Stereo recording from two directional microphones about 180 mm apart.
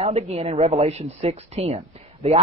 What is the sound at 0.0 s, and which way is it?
Speech, 35° right (ahead or behind).